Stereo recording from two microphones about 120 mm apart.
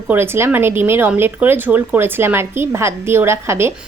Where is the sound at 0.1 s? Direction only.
20° right (ahead or behind).